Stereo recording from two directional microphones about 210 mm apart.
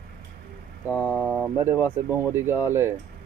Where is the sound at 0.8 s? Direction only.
10° right (ahead or behind).